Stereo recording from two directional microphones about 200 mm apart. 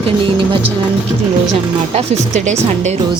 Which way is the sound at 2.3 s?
35° right (ahead or behind).